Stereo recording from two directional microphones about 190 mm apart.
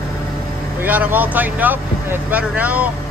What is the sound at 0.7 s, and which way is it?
Speech, 10° right (ahead or behind).